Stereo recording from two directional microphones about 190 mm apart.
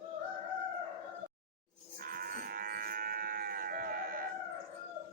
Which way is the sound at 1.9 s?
50° right (ahead or behind).